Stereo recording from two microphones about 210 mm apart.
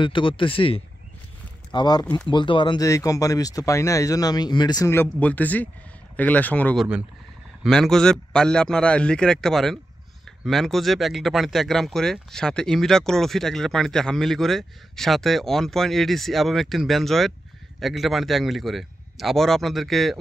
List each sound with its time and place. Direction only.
0.0 s speech: 25° left (ahead or behind); by 20.2 s centre (ahead or behind)